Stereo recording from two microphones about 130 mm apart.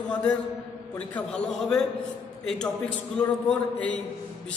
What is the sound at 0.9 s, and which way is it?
A man's voice, 10° left (ahead or behind).